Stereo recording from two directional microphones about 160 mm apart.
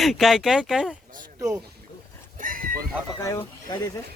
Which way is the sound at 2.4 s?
60° right (ahead or behind).